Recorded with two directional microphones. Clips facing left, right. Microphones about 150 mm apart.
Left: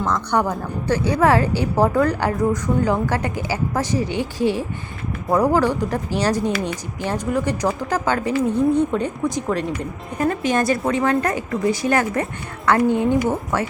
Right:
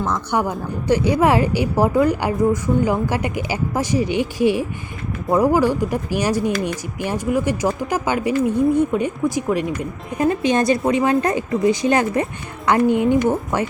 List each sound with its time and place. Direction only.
0.0 s a woman's voice: 10° right (ahead or behind)